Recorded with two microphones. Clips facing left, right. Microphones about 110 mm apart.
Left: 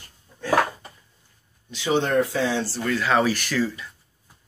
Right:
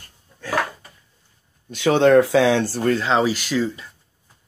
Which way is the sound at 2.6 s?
45° right (ahead or behind).